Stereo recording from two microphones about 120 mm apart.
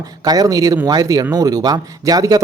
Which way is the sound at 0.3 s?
30° right (ahead or behind).